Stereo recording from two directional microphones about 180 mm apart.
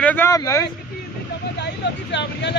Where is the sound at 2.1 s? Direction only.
75° left (ahead or behind).